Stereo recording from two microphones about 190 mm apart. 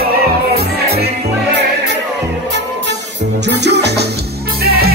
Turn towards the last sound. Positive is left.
turn(degrees=-60)  # may be behind; listen again after turning